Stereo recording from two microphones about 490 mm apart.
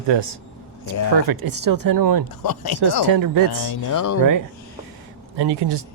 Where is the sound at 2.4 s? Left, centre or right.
Left.